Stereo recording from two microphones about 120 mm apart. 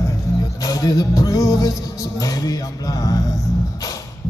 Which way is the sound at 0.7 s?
30° left (ahead or behind).